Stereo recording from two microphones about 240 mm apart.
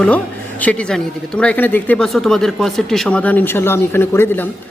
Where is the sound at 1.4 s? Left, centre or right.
Centre.